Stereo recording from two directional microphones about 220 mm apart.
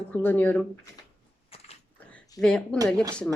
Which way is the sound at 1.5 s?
25° left (ahead or behind).